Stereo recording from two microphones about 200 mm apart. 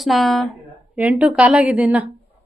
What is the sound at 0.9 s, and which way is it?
A woman's voice, 5° right (ahead or behind).